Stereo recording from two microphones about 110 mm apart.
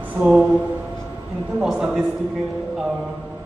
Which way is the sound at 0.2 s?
25° right (ahead or behind).